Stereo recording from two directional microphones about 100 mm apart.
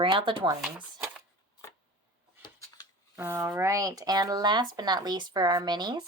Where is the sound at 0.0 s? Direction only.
55° right (ahead or behind).